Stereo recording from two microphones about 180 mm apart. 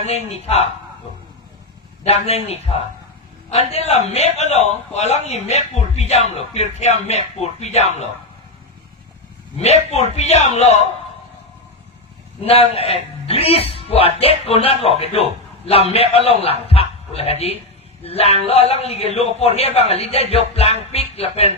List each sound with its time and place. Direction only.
0.0 s a man's voice: 35° left (ahead or behind)
2.0 s a man's voice: 35° left (ahead or behind)
9.6 s a man's voice: 35° left (ahead or behind)
12.5 s a man's voice: 30° left (ahead or behind)